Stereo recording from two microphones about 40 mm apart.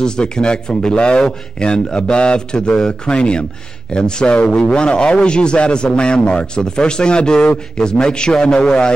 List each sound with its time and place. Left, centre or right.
0.0 s a man's voice: left